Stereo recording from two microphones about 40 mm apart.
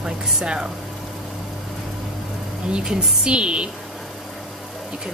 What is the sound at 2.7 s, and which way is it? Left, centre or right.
A woman's voice, right.